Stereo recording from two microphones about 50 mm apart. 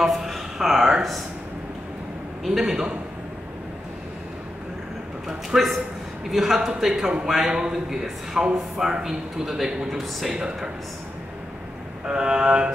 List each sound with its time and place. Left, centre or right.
0.0 s speech: centre
2.4 s a man's voice: centre
5.5 s a man's voice: centre
6.3 s a man's voice: centre
12.1 s a man's voice: centre